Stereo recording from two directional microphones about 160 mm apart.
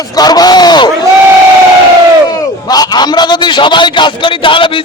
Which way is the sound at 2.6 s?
25° left (ahead or behind).